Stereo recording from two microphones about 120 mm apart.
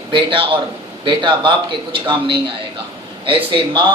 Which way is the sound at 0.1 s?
45° right (ahead or behind).